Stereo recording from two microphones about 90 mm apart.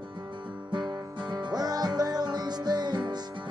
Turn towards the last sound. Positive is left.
turn(degrees=-55)  # may be behind; listen again after turning